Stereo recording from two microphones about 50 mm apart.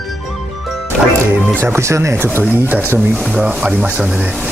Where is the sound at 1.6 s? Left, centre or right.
Right.